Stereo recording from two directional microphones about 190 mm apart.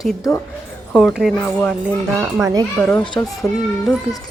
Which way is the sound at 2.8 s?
10° left (ahead or behind).